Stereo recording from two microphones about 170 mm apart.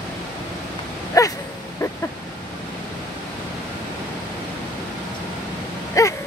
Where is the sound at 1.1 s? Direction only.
20° left (ahead or behind).